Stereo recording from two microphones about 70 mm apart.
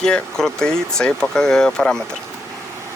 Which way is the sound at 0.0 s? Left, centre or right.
Centre.